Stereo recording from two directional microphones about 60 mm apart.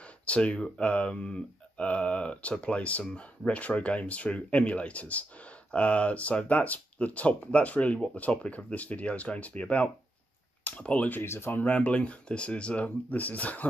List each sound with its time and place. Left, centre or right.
0.0 s speech: left
11.2 s speech: left
11.6 s speech: left